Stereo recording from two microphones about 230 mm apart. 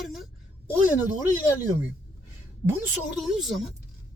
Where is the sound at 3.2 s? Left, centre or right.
Centre.